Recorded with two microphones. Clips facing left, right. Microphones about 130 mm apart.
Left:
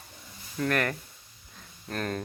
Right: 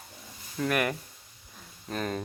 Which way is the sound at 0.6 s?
10° right (ahead or behind).